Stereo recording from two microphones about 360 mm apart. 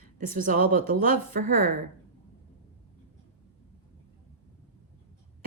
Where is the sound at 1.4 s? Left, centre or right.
Right.